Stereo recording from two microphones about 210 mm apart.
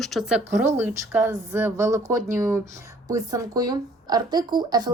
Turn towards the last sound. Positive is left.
turn(degrees=-20)  # may be behind; listen again after turning